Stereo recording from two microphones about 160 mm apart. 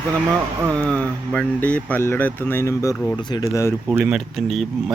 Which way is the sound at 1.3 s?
10° left (ahead or behind).